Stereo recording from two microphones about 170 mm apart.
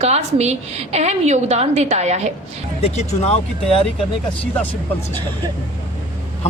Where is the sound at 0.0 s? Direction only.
40° right (ahead or behind).